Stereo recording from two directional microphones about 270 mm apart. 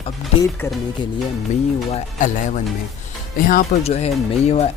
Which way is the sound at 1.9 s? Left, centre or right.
Left.